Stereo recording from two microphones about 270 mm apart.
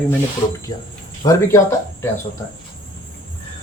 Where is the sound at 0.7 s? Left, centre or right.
Centre.